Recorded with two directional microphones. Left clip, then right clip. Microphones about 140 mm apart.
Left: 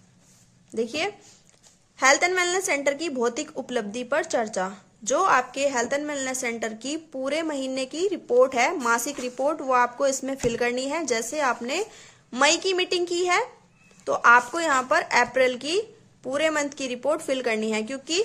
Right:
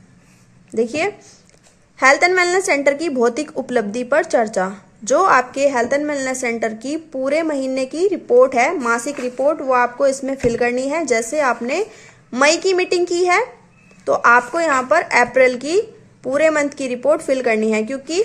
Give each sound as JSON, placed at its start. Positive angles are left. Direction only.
{"t": 0.7, "sound": "a woman's voice", "side_deg": 15}